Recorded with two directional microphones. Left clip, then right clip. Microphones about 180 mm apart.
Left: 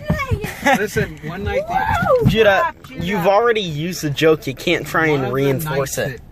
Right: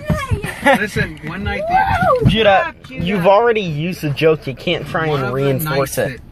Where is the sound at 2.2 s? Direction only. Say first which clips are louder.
Right 1 dB; 5° left (ahead or behind).